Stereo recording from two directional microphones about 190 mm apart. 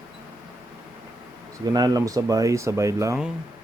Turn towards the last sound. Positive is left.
turn(degrees=-15)  # may be behind; listen again after turning